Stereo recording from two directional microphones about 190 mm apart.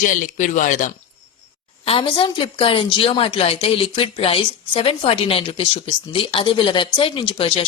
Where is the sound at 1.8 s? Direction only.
30° left (ahead or behind).